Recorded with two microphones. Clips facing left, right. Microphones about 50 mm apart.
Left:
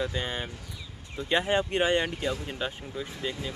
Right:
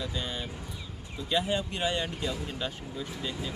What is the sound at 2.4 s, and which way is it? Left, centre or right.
Speech, centre.